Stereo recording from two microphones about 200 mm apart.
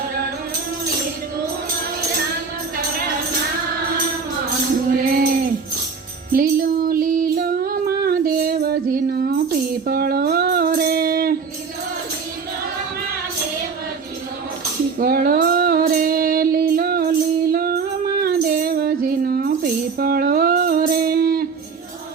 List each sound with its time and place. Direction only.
4.9 s tambourine: 45° right (ahead or behind)
6.3 s female singing: 45° right (ahead or behind)
14.9 s female singing: 45° right (ahead or behind)